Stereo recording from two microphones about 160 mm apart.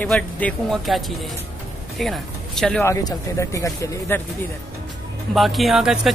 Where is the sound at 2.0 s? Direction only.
Centre (ahead or behind).